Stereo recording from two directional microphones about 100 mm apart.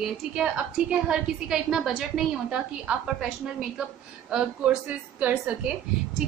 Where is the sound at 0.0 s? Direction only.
5° right (ahead or behind).